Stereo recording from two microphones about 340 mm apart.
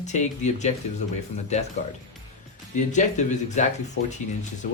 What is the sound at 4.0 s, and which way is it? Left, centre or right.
Speech, left.